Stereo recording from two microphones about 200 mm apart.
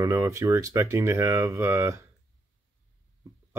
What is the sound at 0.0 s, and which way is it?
Speech, 15° right (ahead or behind).